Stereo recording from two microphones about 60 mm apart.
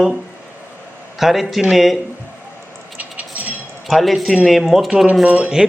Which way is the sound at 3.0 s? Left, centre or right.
Right.